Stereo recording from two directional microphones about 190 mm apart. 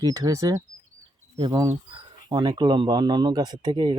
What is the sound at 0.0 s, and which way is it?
Speech, 20° right (ahead or behind).